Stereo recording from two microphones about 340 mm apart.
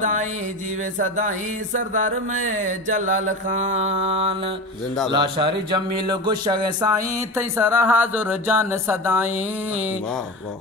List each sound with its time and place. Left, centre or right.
0.0 s music: right
1.7 s mantra: right
5.1 s a sound: centre